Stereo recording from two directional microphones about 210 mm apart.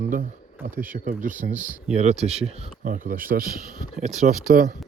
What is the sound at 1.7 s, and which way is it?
Speech, 5° right (ahead or behind).